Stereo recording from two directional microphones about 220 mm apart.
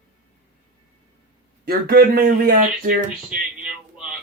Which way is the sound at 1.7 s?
45° right (ahead or behind).